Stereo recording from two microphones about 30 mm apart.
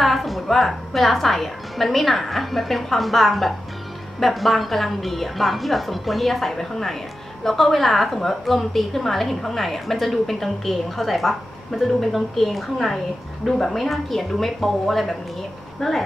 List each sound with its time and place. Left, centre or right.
0.0 s a woman's voice: centre
15.8 s speech: left